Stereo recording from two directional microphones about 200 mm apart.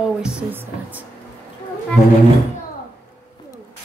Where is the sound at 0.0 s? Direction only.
5° right (ahead or behind).